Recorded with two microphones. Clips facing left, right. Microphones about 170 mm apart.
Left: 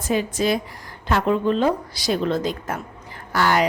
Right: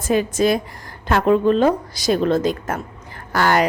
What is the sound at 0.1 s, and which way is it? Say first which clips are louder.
A woman's voice: right 4 dB; 50° right (ahead or behind).